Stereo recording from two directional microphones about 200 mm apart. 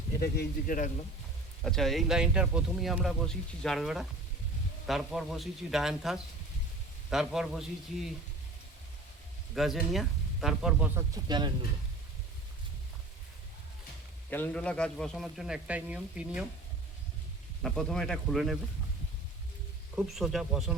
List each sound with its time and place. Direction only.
0.2 s speech: 45° left (ahead or behind)
1.6 s speech: centre (ahead or behind)
9.6 s speech: centre (ahead or behind); by 11.5 s 20° right (ahead or behind)
14.3 s speech: 10° left (ahead or behind)
17.6 s speech: 5° left (ahead or behind)
20.0 s speech: centre (ahead or behind)